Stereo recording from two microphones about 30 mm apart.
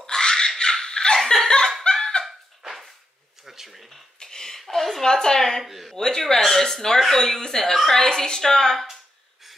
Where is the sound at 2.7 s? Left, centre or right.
Centre.